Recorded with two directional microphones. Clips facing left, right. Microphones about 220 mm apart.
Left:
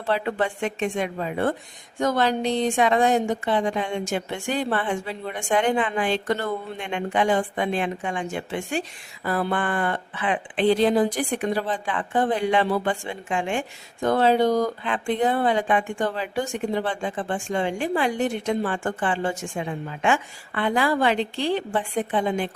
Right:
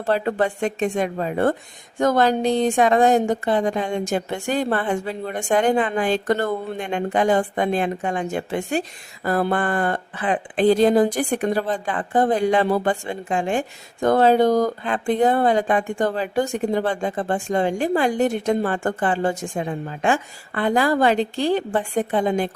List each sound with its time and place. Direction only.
0.0 s speech: 40° right (ahead or behind)